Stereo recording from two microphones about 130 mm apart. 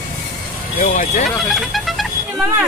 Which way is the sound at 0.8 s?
90° left.